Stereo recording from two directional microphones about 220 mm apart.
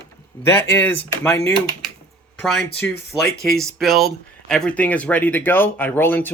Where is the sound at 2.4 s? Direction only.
Centre (ahead or behind).